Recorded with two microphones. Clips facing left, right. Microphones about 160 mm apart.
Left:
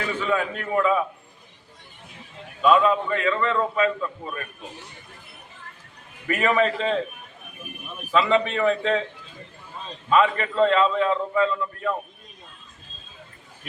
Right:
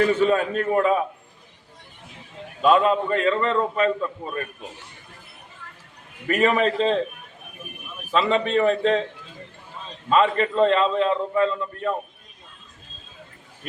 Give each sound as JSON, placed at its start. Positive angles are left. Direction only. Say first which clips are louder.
{"t": 0.0, "sound": "a man's voice", "louder": "right 6 dB", "side_deg": -40}
{"t": 2.6, "sound": "a man's voice", "louder": "right 1 dB", "side_deg": -35}
{"t": 6.2, "sound": "a man's voice", "louder": "right 2 dB", "side_deg": -30}
{"t": 8.1, "sound": "a man's voice", "louder": "right 1 dB", "side_deg": -30}
{"t": 10.1, "sound": "a man's voice", "louder": "right 1 dB", "side_deg": -30}